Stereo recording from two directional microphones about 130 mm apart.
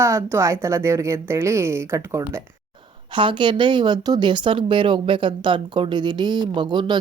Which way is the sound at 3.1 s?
40° right (ahead or behind).